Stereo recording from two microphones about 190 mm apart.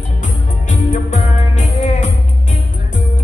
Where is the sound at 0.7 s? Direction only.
40° left (ahead or behind).